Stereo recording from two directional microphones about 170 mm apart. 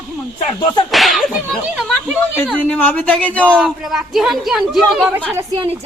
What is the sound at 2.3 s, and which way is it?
Speech, 10° left (ahead or behind).